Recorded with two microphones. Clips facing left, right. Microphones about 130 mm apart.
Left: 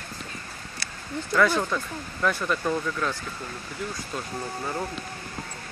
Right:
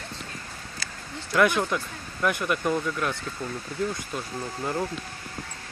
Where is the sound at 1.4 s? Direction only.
15° right (ahead or behind).